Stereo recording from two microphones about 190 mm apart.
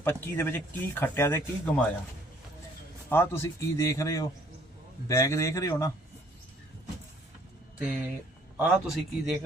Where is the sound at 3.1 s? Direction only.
10° left (ahead or behind).